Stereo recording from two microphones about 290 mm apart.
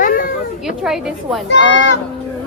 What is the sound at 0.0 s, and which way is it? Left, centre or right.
Children playing, left.